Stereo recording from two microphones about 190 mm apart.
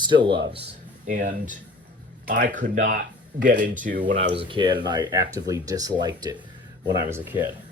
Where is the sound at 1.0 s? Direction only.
40° right (ahead or behind).